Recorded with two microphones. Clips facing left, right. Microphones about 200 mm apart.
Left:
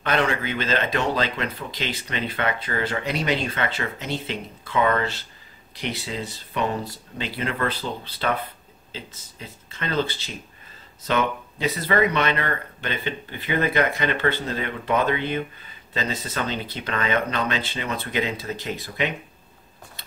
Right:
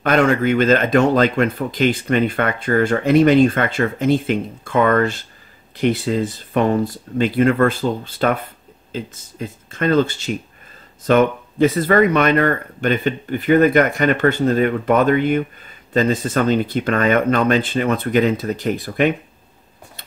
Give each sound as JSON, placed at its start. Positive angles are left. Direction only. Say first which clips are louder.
{"t": 0.0, "sound": "speech", "louder": "right 8 dB", "side_deg": -45}